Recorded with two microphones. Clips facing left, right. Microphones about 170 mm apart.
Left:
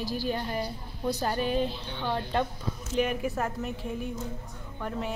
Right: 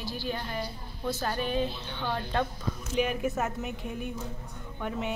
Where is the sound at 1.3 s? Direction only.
40° left (ahead or behind).